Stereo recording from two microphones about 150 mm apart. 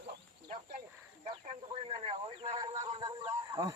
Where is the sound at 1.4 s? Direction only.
40° right (ahead or behind).